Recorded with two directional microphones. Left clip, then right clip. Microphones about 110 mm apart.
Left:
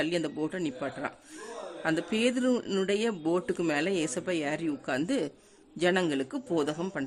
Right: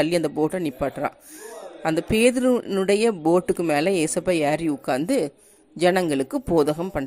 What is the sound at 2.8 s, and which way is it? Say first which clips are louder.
Speech: right 9 dB; 35° right (ahead or behind).